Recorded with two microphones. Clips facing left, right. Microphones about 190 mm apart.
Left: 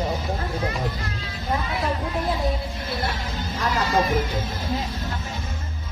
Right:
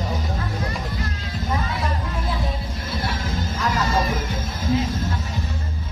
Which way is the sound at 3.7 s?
45° right (ahead or behind).